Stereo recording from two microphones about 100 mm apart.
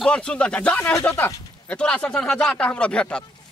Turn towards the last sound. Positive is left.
turn(degrees=10)  # may be behind; listen again after turning